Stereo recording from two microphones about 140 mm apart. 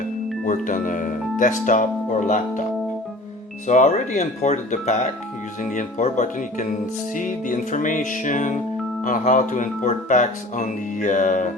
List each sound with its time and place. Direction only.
0.4 s speech: 65° left (ahead or behind)
3.7 s speech: 60° left (ahead or behind)